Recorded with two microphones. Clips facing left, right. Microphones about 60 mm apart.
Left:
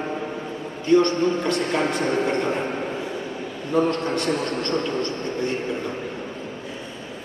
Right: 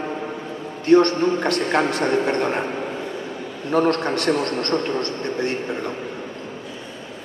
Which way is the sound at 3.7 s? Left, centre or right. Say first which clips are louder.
Right 2 dB; right.